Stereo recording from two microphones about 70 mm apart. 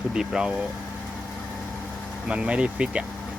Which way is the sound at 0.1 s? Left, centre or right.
Centre.